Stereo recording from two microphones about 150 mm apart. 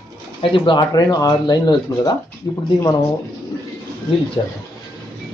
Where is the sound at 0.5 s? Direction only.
30° left (ahead or behind).